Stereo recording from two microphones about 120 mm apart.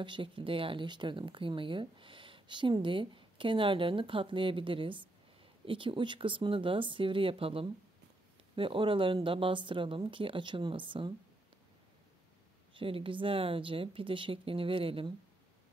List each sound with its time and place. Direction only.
0.0 s speech: 45° right (ahead or behind)
12.7 s speech: 45° right (ahead or behind)